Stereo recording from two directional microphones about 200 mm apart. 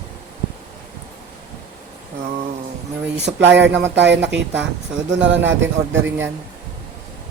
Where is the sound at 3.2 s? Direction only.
60° right (ahead or behind).